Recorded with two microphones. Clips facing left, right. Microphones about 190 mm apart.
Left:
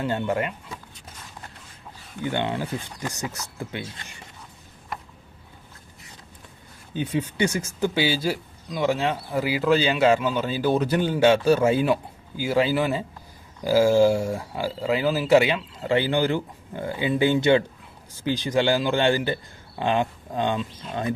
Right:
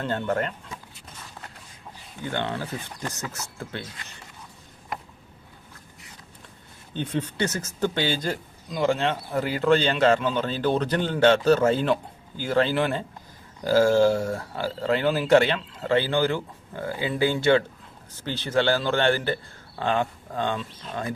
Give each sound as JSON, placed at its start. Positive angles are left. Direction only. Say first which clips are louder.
{"t": 0.0, "sound": "speech", "louder": "left 1 dB", "side_deg": 10}
{"t": 2.2, "sound": "speech", "louder": "left 3 dB", "side_deg": 15}
{"t": 6.9, "sound": "speech", "louder": "left 2 dB", "side_deg": 10}